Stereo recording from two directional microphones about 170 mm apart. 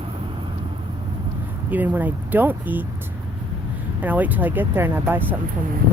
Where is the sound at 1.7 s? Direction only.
10° right (ahead or behind).